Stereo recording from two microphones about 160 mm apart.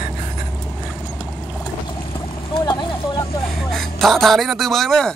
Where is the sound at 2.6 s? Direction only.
25° left (ahead or behind).